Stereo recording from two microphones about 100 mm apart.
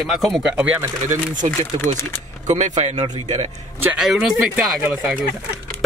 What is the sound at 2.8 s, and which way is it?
Speech, 90° right.